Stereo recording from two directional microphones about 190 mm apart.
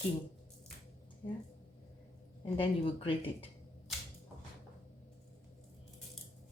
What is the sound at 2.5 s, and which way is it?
Speech, 30° left (ahead or behind).